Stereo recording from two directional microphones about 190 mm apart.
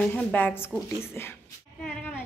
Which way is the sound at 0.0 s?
5° left (ahead or behind).